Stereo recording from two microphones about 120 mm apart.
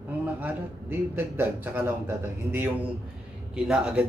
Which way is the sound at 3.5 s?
5° right (ahead or behind).